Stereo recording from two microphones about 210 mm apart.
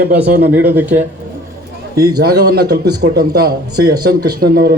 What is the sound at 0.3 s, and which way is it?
Speech, 50° right (ahead or behind).